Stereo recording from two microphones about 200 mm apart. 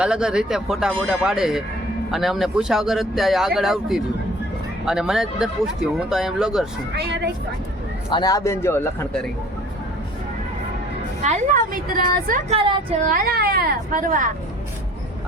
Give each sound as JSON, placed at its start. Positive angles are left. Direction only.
{"t": 0.0, "sound": "speech", "side_deg": -5}
{"t": 6.9, "sound": "a woman's voice", "side_deg": -55}
{"t": 8.1, "sound": "a man's voice", "side_deg": 20}
{"t": 11.2, "sound": "a woman's voice", "side_deg": -40}
{"t": 12.5, "sound": "a woman's voice", "side_deg": -25}
{"t": 13.1, "sound": "speech", "side_deg": -45}